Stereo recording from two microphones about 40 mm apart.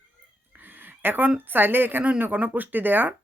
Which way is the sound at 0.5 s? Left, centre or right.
Right.